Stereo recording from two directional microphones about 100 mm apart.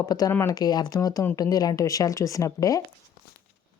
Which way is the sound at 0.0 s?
40° left (ahead or behind).